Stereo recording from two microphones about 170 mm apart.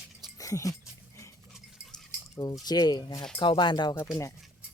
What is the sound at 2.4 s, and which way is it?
Speech, 25° left (ahead or behind).